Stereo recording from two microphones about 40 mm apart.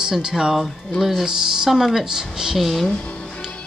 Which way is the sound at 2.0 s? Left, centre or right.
Centre.